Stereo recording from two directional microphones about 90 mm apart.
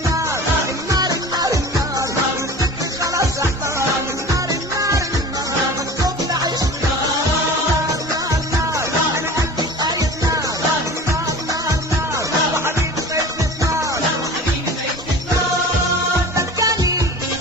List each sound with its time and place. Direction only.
0.9 s music: 45° right (ahead or behind)
4.8 s music: 35° right (ahead or behind)
12.1 s music: 30° right (ahead or behind)
16.3 s music: 40° right (ahead or behind)